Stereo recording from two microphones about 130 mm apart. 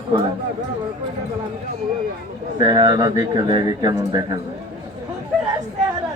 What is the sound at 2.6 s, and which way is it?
Speech, 30° right (ahead or behind).